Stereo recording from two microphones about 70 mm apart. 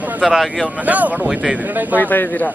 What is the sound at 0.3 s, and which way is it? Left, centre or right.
Speech, centre.